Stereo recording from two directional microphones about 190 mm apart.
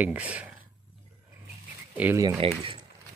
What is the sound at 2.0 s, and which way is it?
Speech, 15° right (ahead or behind).